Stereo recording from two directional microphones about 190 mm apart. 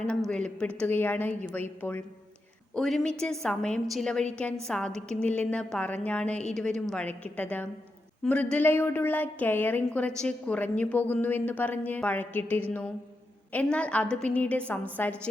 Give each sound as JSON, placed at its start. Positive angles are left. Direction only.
{"t": 0.3, "sound": "a woman's voice", "side_deg": 5}